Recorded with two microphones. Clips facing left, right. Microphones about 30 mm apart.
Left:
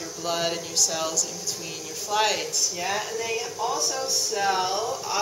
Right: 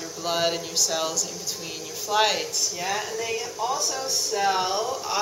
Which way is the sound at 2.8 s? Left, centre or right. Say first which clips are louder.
Right 1 dB; centre.